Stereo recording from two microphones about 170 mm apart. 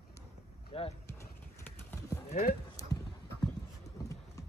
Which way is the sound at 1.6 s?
10° left (ahead or behind).